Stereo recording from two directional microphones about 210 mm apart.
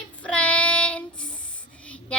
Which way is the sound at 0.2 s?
5° left (ahead or behind).